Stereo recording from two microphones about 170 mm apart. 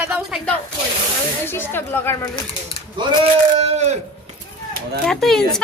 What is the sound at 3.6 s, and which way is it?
Speech, 40° right (ahead or behind).